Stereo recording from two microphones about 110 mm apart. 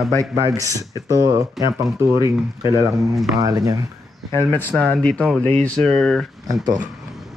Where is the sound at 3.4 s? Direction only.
35° right (ahead or behind).